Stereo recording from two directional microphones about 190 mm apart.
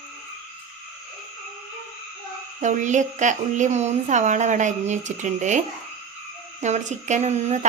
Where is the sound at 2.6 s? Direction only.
40° right (ahead or behind).